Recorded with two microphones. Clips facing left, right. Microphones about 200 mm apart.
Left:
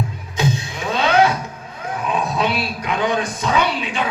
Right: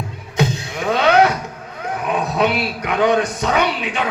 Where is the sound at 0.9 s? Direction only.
65° right (ahead or behind).